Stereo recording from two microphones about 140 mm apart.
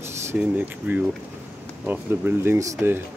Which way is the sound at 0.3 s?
10° right (ahead or behind).